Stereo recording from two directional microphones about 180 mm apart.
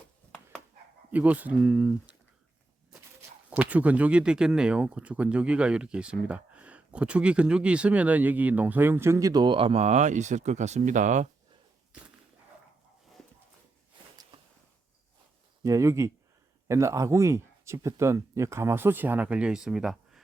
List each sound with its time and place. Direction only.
1.1 s speech: 10° right (ahead or behind)
3.5 s speech: 10° right (ahead or behind); by 11.3 s 45° right (ahead or behind)
15.6 s speech: 15° right (ahead or behind)